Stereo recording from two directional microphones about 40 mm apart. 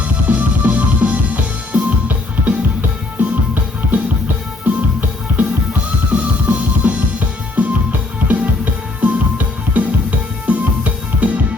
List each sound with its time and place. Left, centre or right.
0.3 s music: right
3.2 s music: right
9.0 s music: right